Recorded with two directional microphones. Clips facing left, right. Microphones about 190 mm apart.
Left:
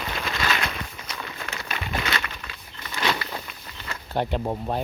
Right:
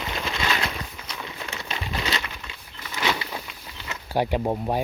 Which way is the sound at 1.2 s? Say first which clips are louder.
Even; 10° right (ahead or behind).